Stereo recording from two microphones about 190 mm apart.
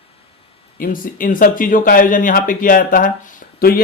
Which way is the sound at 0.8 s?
45° left (ahead or behind).